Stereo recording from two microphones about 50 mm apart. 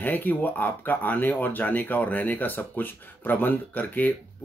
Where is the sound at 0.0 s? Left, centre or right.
Left.